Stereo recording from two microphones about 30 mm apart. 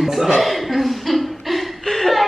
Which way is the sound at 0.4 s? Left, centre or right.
Centre.